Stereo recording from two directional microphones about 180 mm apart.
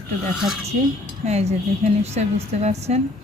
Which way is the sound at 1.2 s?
40° right (ahead or behind).